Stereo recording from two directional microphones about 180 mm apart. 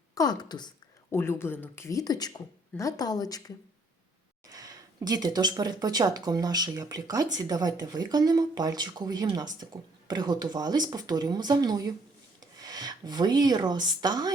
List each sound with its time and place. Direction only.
0.1 s a woman's voice: 20° left (ahead or behind)
4.4 s speech: 20° right (ahead or behind)